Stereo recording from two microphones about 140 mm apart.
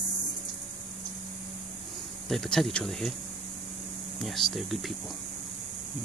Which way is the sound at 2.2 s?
Centre (ahead or behind).